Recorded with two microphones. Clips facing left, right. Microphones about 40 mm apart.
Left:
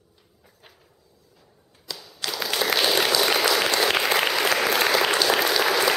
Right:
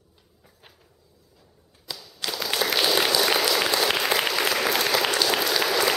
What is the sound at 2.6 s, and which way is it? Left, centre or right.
Applause, centre.